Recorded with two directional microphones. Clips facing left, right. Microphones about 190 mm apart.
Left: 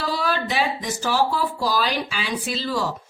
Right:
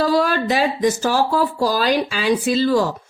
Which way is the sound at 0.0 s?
45° right (ahead or behind).